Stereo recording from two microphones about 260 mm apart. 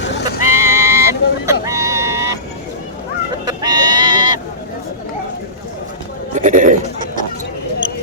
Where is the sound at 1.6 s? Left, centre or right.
Centre.